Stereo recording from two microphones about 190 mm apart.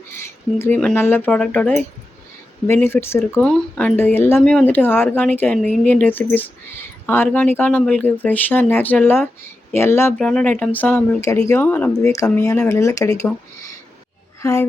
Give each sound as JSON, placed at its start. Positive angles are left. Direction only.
{"t": 0.6, "sound": "speech", "side_deg": 5}
{"t": 14.4, "sound": "speech", "side_deg": 15}